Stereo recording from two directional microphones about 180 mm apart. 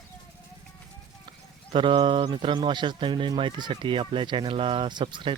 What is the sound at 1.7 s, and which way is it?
Speech, 30° right (ahead or behind).